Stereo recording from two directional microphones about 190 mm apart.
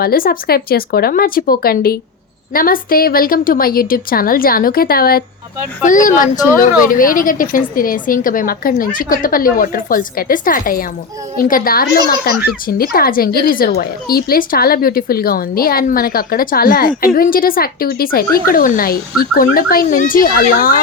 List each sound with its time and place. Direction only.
0.0 s a woman's voice: 50° left (ahead or behind)